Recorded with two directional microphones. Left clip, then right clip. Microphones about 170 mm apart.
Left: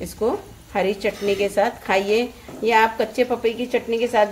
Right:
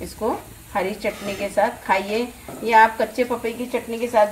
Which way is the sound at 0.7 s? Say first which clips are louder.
Left 2 dB; 30° left (ahead or behind).